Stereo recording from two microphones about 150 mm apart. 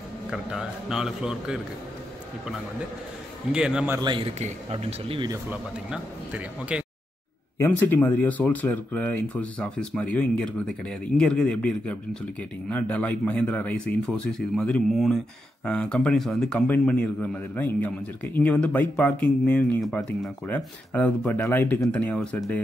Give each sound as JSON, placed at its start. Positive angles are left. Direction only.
{"t": 0.3, "sound": "a man's voice", "side_deg": -5}
{"t": 3.5, "sound": "a man's voice", "side_deg": -5}
{"t": 4.0, "sound": "speech", "side_deg": -35}
{"t": 5.5, "sound": "speech", "side_deg": -10}
{"t": 7.5, "sound": "speech", "side_deg": 15}